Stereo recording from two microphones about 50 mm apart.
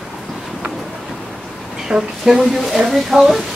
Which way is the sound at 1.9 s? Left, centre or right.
Right.